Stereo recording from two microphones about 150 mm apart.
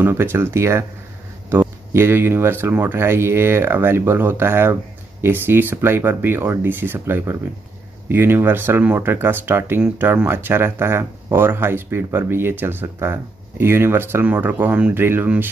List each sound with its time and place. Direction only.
0.0 s speech: 15° right (ahead or behind)